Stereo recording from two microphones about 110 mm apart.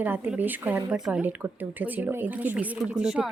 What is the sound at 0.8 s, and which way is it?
Speech, 5° right (ahead or behind).